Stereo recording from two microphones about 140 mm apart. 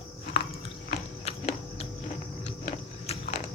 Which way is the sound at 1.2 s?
50° left (ahead or behind).